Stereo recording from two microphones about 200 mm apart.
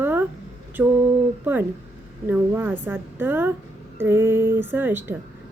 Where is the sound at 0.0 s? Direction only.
10° right (ahead or behind).